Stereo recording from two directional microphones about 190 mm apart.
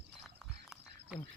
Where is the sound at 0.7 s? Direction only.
5° right (ahead or behind).